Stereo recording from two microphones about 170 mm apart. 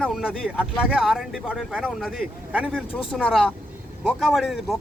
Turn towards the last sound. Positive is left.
turn(degrees=0)  # may be behind; listen again after turning